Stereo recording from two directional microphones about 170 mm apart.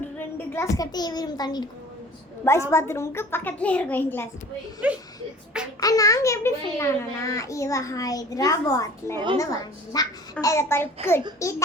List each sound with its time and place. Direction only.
0.3 s a child's voice: 15° left (ahead or behind)
4.8 s speech: 5° right (ahead or behind)
5.8 s a child's voice: 20° left (ahead or behind)